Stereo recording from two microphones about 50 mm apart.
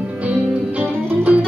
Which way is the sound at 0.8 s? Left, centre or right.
Right.